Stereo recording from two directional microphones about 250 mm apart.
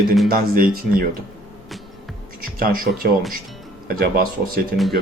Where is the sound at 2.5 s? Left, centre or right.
Right.